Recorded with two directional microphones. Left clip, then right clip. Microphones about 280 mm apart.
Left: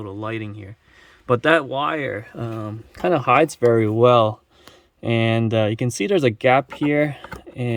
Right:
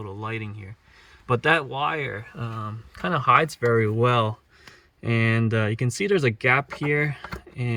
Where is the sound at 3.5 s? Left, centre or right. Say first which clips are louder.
Left 5 dB; left.